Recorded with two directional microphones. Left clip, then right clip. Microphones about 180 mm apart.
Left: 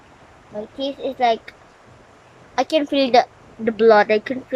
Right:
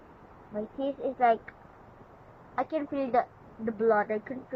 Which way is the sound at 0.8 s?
15° left (ahead or behind).